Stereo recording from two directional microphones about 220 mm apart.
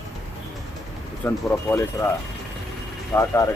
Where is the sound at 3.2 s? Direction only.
15° left (ahead or behind).